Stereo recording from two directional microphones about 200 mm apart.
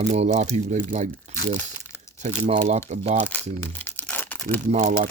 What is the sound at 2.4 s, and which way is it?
Speech, 30° right (ahead or behind).